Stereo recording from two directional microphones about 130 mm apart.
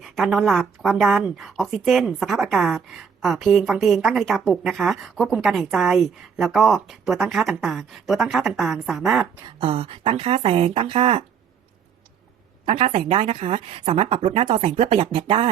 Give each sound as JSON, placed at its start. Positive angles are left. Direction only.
{"t": 0.0, "sound": "a woman's voice", "side_deg": 0}
{"t": 9.6, "sound": "speech", "side_deg": -45}
{"t": 12.6, "sound": "speech", "side_deg": -45}